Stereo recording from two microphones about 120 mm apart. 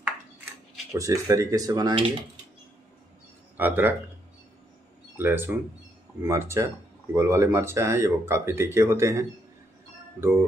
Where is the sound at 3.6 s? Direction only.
15° right (ahead or behind).